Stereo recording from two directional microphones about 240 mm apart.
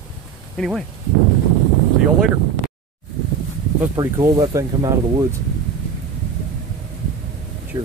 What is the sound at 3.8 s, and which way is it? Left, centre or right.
Speech, centre.